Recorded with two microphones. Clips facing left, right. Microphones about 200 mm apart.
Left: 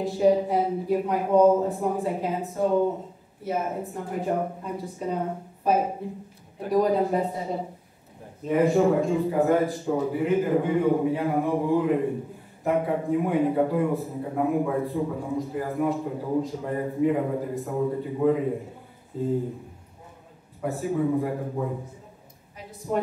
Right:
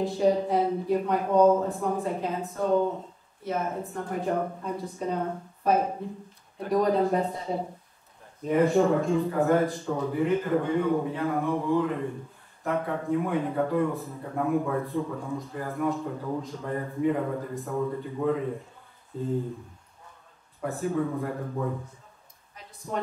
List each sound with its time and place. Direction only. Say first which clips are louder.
0.0 s a man's voice: left 3 dB; 5° left (ahead or behind)
20.6 s a man's voice: left 3 dB; 5° left (ahead or behind)
22.6 s a sound: left 7 dB; 5° left (ahead or behind)